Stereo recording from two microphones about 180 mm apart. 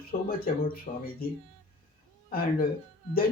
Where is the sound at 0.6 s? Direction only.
55° left (ahead or behind).